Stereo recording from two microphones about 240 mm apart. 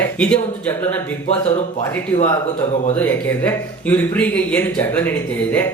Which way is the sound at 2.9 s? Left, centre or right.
Centre.